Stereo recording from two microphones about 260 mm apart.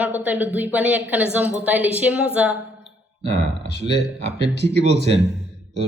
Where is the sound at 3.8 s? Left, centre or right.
Right.